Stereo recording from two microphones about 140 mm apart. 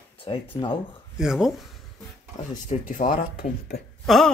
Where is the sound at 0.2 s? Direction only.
40° left (ahead or behind).